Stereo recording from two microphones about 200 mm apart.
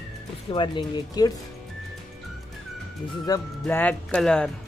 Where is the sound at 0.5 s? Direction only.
25° left (ahead or behind).